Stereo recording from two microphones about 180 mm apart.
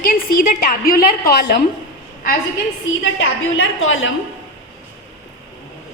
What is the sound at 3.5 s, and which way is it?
Speech, 90° left.